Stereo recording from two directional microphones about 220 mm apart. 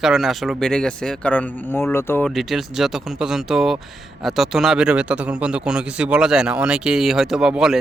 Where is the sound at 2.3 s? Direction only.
Centre (ahead or behind).